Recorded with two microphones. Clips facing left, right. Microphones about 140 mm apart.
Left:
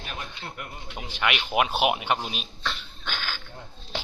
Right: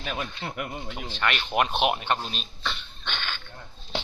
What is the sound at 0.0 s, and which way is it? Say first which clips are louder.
Speech: right 5 dB; 90° right.